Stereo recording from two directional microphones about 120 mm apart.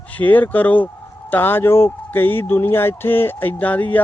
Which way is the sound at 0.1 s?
15° left (ahead or behind).